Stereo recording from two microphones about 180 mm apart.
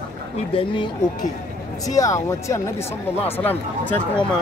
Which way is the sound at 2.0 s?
15° left (ahead or behind).